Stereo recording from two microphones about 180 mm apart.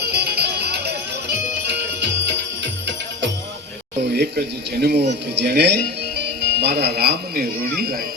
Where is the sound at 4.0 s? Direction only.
65° right (ahead or behind).